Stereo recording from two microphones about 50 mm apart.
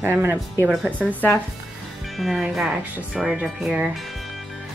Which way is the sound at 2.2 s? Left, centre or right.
Centre.